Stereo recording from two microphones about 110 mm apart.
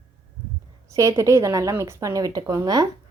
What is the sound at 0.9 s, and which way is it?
Speech, 30° right (ahead or behind).